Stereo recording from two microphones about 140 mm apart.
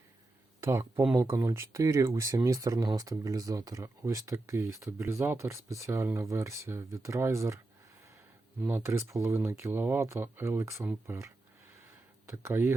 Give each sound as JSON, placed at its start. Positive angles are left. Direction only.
{"t": 0.6, "sound": "speech", "side_deg": -20}
{"t": 8.6, "sound": "speech", "side_deg": -15}
{"t": 12.4, "sound": "speech", "side_deg": -15}